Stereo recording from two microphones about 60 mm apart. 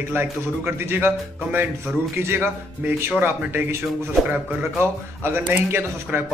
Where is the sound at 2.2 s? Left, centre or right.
Right.